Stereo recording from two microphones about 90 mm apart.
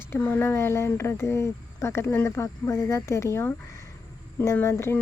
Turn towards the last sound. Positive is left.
turn(degrees=30)  # may be behind; listen again after turning